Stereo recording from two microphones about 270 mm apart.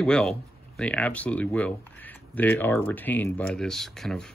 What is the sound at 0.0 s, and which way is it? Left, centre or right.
Speech, centre.